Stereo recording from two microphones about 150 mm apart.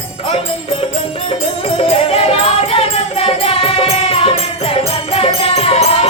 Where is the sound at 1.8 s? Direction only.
40° left (ahead or behind).